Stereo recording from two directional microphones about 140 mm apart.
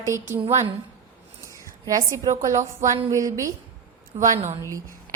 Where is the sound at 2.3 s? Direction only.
60° right (ahead or behind).